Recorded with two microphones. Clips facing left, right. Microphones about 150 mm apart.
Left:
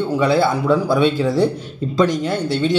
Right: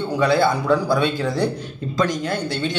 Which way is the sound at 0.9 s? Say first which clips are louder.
Left 4 dB; 30° left (ahead or behind).